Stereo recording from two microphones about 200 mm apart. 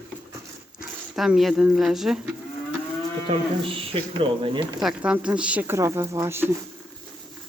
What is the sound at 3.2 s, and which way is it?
Speech, 25° right (ahead or behind).